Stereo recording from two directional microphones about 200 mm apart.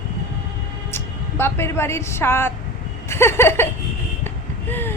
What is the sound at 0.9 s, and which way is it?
A woman's voice, 10° left (ahead or behind).